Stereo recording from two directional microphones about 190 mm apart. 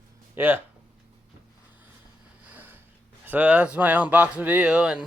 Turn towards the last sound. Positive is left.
turn(degrees=-5)  # may be behind; listen again after turning